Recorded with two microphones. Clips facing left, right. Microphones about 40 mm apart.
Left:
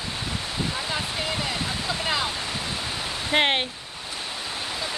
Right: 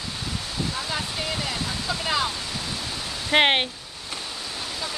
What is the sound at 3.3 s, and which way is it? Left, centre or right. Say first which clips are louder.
Speech: right 3 dB; right.